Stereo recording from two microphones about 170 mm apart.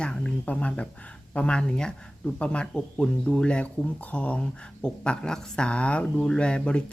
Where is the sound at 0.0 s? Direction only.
5° left (ahead or behind).